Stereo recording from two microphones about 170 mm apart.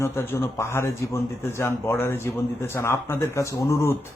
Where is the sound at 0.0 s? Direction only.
15° left (ahead or behind).